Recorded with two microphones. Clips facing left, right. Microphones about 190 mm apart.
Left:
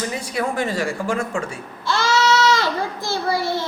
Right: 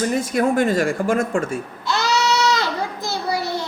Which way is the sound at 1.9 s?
20° right (ahead or behind).